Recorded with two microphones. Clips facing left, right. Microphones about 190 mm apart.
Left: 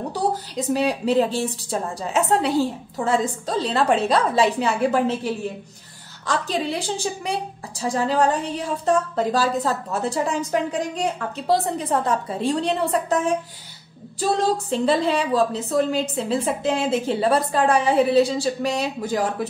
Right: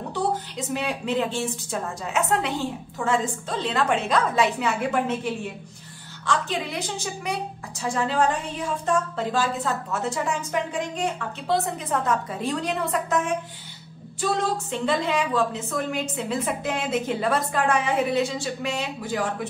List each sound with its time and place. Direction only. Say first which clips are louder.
0.1 s a woman's voice: right 1 dB; 35° left (ahead or behind)